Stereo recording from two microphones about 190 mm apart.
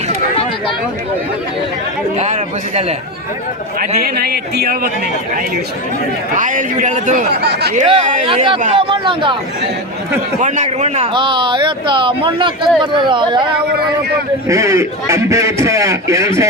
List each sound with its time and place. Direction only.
2.1 s speech: 35° right (ahead or behind)
3.8 s a man's voice: 50° right (ahead or behind)
6.3 s a man's voice: 40° right (ahead or behind)
7.3 s speech: 60° right (ahead or behind)
7.9 s speech: 30° right (ahead or behind)
10.4 s a man's voice: 40° right (ahead or behind); by 16.3 s 15° right (ahead or behind)